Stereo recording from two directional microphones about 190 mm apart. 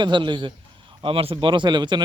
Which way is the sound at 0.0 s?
25° right (ahead or behind).